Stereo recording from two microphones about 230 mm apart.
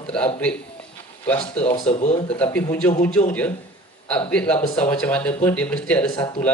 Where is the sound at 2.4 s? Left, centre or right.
Centre.